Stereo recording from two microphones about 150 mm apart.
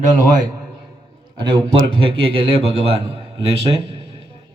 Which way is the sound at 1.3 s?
30° right (ahead or behind).